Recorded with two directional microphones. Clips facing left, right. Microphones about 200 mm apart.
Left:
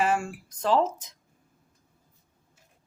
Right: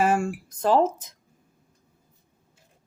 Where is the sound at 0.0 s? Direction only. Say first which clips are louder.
Right 3 dB; 50° right (ahead or behind).